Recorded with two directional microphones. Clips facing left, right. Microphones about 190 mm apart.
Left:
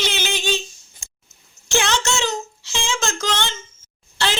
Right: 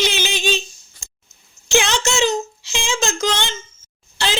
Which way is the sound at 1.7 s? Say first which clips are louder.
Right 2 dB; 15° right (ahead or behind).